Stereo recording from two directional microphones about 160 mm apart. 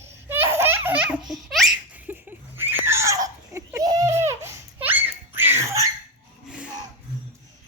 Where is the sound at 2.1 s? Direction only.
10° right (ahead or behind).